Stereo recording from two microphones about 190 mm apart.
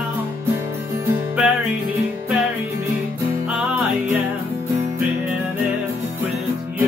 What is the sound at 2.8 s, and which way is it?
Music, 15° right (ahead or behind).